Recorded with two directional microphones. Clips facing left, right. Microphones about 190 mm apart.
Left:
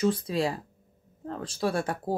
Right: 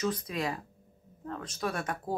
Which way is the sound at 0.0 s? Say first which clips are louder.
Left 6 dB; 30° left (ahead or behind).